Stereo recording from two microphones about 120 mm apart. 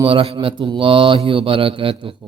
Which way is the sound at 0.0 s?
50° right (ahead or behind).